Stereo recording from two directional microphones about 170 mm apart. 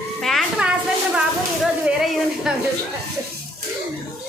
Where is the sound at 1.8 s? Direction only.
5° right (ahead or behind).